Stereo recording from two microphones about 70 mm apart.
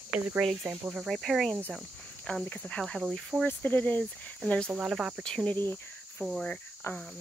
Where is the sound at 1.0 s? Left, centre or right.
Centre.